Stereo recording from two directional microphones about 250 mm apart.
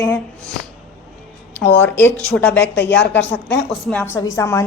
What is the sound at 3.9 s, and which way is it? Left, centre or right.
Speech, centre.